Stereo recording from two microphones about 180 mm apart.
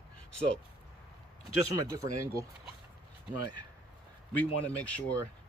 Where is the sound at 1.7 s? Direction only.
20° right (ahead or behind).